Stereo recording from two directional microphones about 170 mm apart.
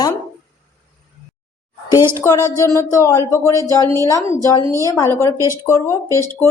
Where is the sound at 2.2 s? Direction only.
15° left (ahead or behind).